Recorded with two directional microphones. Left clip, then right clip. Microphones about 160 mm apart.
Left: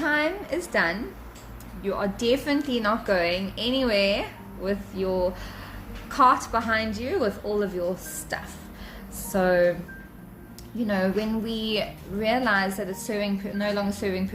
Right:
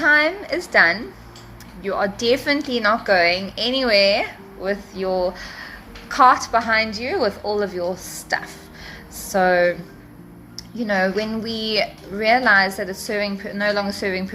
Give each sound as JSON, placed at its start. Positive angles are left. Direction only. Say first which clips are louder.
{"t": 0.0, "sound": "a sound", "louder": "right 8 dB", "side_deg": 50}
{"t": 2.0, "sound": "speech", "louder": "right 6 dB", "side_deg": 50}
{"t": 5.0, "sound": "speech", "louder": "right 4 dB", "side_deg": 15}
{"t": 6.1, "sound": "speech", "louder": "right 6 dB", "side_deg": 50}
{"t": 9.3, "sound": "speech", "louder": "right 5 dB", "side_deg": 50}
{"t": 10.8, "sound": "speech", "louder": "right 6 dB", "side_deg": 50}
{"t": 12.1, "sound": "a woman's voice", "louder": "right 6 dB", "side_deg": 30}
{"t": 12.5, "sound": "speech", "louder": "right 8 dB", "side_deg": 50}